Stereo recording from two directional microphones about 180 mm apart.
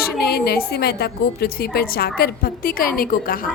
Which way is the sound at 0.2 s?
60° left (ahead or behind).